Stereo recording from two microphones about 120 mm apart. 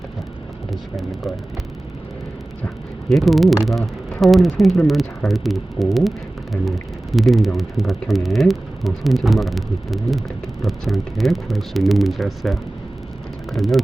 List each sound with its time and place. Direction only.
0.7 s speech: centre (ahead or behind)
3.1 s speech: centre (ahead or behind)